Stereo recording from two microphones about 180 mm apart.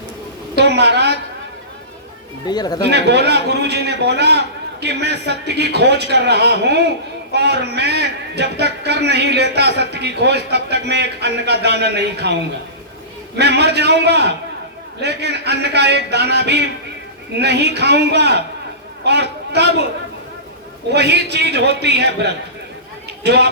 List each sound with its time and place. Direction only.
0.5 s a woman's voice: 70° right (ahead or behind)
2.5 s speech: 20° left (ahead or behind)
2.9 s a man's voice: 70° right (ahead or behind)
13.4 s a man's voice: 70° right (ahead or behind)
20.9 s a man's voice: 65° right (ahead or behind)